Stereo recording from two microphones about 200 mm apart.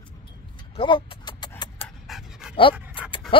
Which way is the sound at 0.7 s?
25° left (ahead or behind).